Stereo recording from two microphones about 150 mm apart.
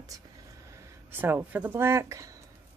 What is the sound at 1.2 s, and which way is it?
Speech, 10° right (ahead or behind).